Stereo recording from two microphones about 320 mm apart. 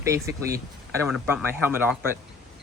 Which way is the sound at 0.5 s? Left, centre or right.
Centre.